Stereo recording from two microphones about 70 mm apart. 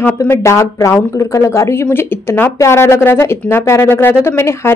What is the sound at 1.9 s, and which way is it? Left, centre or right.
A woman's voice, left.